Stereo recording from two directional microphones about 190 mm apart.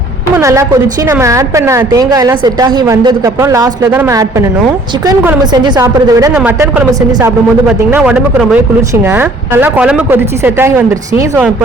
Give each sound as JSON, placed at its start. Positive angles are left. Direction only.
{"t": 0.3, "sound": "a woman's voice", "side_deg": -15}
{"t": 6.3, "sound": "speech", "side_deg": -5}